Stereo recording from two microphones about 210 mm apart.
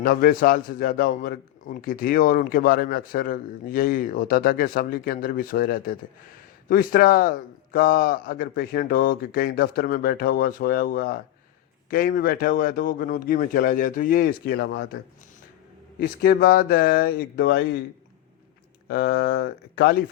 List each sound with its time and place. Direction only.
0.0 s a man's voice: 45° left (ahead or behind)
16.0 s a man's voice: 45° left (ahead or behind)
18.9 s a man's voice: 50° left (ahead or behind)